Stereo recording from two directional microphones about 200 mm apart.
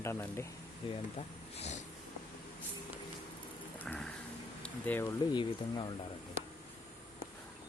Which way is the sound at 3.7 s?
5° left (ahead or behind).